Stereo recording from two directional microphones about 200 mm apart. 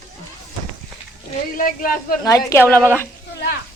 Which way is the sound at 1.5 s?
45° left (ahead or behind).